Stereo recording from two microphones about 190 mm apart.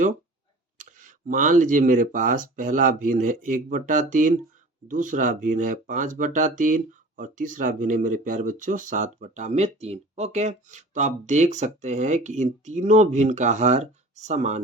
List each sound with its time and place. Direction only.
0.8 s speech: 45° right (ahead or behind)